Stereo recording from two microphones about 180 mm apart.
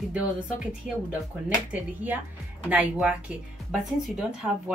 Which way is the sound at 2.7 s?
5° right (ahead or behind).